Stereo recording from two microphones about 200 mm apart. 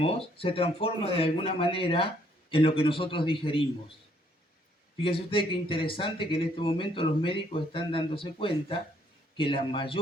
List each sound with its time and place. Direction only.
0.0 s speech: 25° left (ahead or behind)
4.9 s speech: 25° left (ahead or behind)